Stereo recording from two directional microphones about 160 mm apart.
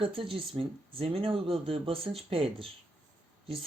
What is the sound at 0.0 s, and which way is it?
Speech, 35° right (ahead or behind).